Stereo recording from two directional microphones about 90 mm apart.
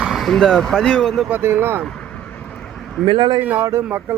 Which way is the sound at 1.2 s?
20° right (ahead or behind).